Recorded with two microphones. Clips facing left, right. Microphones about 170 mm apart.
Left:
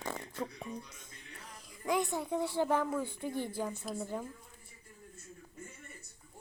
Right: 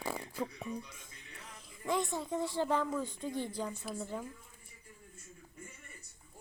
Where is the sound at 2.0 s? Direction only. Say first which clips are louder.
Left 2 dB; 15° left (ahead or behind).